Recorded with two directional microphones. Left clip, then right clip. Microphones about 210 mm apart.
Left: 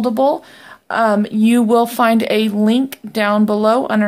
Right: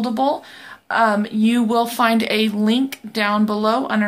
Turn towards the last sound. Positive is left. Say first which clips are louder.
# left 5 dB
turn(degrees=50)  # may be behind; listen again after turning